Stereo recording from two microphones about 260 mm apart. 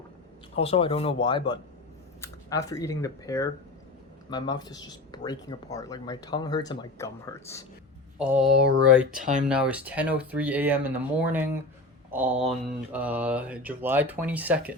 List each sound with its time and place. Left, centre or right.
0.5 s speech: left
8.2 s speech: centre
9.1 s speech: right
9.5 s speech: centre